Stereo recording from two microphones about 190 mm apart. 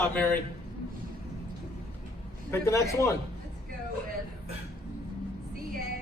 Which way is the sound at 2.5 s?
15° left (ahead or behind).